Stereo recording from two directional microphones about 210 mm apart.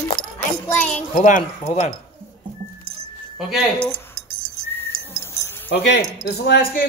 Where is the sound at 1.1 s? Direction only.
35° left (ahead or behind).